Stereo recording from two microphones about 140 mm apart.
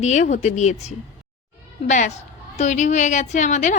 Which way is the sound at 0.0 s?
55° left (ahead or behind).